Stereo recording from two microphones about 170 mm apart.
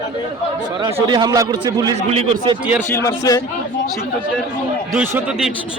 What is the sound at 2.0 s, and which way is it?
Speech, 35° right (ahead or behind).